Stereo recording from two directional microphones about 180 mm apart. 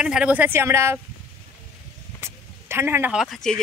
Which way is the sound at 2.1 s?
15° right (ahead or behind).